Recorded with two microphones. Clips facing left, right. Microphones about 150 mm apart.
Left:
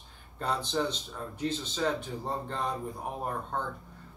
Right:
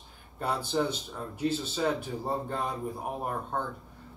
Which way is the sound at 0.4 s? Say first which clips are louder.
Right 1 dB; 10° right (ahead or behind).